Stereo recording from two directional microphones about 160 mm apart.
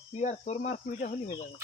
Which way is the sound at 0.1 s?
45° left (ahead or behind).